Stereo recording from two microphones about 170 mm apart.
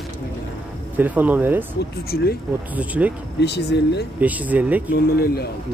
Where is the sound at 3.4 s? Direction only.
85° left.